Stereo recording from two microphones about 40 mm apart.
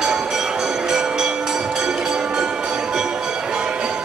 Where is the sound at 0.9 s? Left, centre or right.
Centre.